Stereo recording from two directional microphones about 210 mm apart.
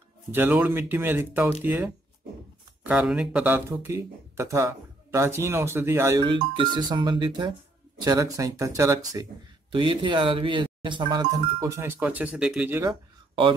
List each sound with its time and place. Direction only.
0.3 s speech: 10° right (ahead or behind)